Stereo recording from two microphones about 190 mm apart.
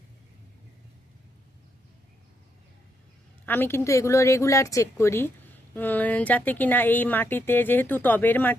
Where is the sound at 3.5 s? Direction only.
10° left (ahead or behind).